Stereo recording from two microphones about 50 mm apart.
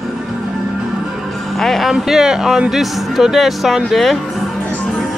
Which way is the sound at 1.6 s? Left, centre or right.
Centre.